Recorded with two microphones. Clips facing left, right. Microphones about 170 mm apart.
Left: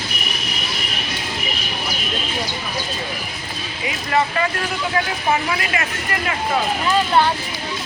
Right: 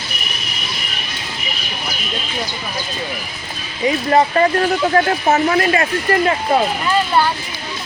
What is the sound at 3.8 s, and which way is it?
Speech, 35° right (ahead or behind).